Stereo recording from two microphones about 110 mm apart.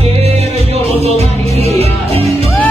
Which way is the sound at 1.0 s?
70° right (ahead or behind).